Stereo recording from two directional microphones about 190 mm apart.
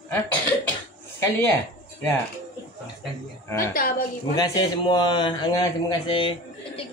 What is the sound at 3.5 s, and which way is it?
A woman's voice, 15° left (ahead or behind).